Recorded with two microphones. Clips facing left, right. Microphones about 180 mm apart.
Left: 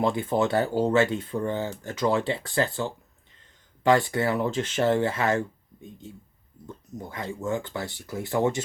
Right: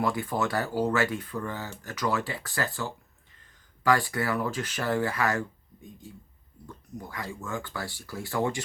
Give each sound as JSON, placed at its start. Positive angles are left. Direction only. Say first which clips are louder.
{"t": 0.0, "sound": "speech", "louder": "left 4 dB", "side_deg": 25}